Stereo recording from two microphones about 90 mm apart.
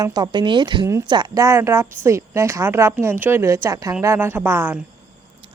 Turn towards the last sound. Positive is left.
turn(degrees=-25)  # may be behind; listen again after turning